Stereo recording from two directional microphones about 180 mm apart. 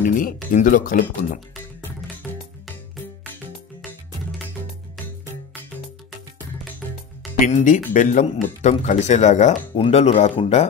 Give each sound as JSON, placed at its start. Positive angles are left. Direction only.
{"t": 0.0, "sound": "speech", "side_deg": 50}
{"t": 2.2, "sound": "music", "side_deg": 0}
{"t": 7.3, "sound": "speech", "side_deg": 45}